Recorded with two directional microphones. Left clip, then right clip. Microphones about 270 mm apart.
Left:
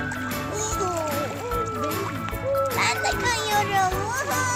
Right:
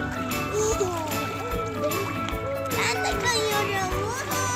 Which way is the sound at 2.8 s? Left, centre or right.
Left.